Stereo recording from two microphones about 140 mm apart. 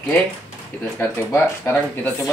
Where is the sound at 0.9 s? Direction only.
15° left (ahead or behind).